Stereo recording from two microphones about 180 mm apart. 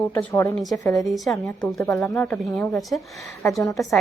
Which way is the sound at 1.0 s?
Centre (ahead or behind).